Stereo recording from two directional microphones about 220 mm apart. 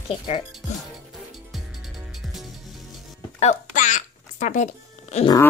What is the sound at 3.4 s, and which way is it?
Music, 35° left (ahead or behind).